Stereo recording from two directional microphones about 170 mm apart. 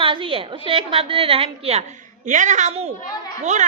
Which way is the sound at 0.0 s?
30° right (ahead or behind).